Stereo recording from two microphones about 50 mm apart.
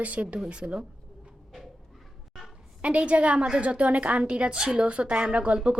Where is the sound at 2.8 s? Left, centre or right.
Right.